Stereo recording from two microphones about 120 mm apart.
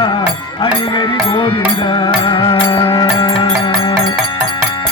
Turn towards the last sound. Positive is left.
turn(degrees=45)  # may be behind; listen again after turning